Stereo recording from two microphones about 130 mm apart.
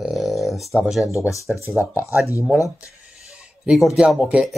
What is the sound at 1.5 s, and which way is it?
Speech, 15° right (ahead or behind).